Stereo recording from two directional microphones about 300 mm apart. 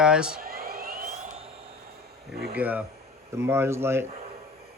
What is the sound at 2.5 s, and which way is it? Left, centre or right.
Speech, centre.